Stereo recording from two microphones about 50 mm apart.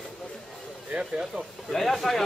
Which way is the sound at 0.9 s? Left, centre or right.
Centre.